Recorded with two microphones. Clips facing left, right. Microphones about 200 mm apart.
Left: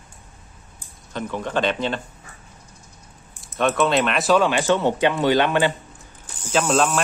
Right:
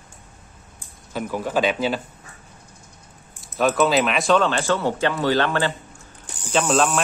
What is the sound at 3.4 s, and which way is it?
Speech, centre (ahead or behind).